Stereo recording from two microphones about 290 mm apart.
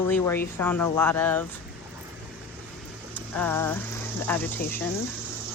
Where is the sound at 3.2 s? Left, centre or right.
Centre.